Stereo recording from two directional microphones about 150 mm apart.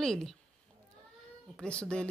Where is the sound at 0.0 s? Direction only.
5° left (ahead or behind).